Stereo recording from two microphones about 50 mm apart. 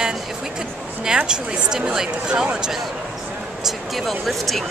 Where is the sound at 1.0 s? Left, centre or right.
Centre.